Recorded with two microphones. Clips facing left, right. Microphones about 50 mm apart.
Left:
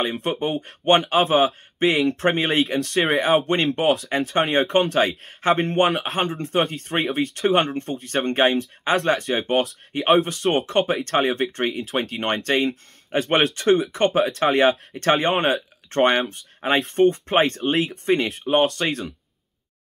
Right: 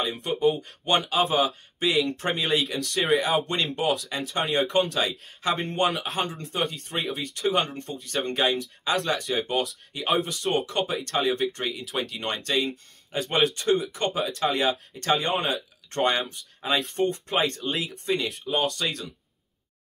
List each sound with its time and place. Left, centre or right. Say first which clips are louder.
0.0 s speech: even; left
5.8 s speech: left 5 dB; left
6.1 s speech: left 6 dB; left